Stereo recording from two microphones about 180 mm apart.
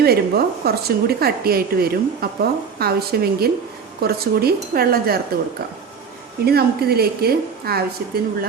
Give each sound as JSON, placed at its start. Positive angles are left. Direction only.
{"t": 0.0, "sound": "a woman's voice", "side_deg": -60}
{"t": 6.4, "sound": "a woman's voice", "side_deg": -60}